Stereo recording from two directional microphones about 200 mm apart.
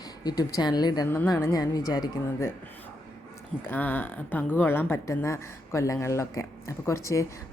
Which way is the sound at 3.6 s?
10° left (ahead or behind).